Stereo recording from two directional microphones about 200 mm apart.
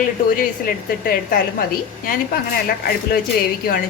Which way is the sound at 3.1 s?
45° left (ahead or behind).